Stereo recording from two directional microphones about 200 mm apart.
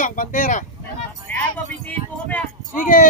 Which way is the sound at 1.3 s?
5° left (ahead or behind).